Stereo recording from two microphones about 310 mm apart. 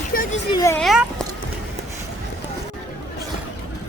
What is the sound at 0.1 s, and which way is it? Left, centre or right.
Children playing, left.